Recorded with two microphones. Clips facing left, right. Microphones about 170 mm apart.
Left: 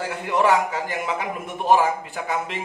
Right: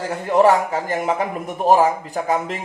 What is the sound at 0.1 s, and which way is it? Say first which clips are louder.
A man's voice: right 5 dB; 40° right (ahead or behind).